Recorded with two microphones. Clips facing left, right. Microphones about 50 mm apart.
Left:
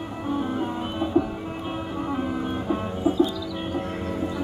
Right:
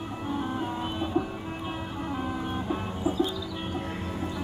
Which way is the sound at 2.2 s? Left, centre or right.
Centre.